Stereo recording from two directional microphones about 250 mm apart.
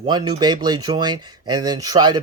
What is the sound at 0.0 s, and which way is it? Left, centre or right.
Speech, centre.